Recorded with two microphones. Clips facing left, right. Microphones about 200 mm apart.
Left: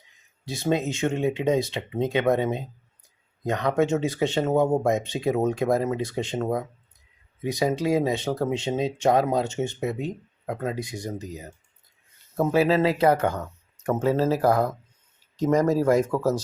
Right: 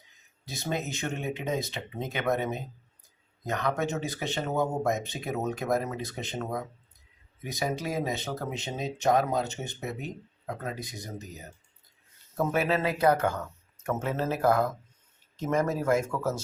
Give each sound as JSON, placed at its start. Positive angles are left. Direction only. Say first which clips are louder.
{"t": 0.4, "sound": "speech", "louder": "left 8 dB", "side_deg": 30}